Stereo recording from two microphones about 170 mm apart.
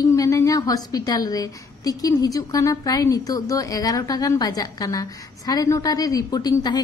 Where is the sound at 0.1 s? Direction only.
20° left (ahead or behind).